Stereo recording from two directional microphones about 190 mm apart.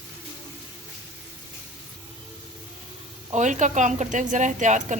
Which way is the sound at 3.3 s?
40° right (ahead or behind).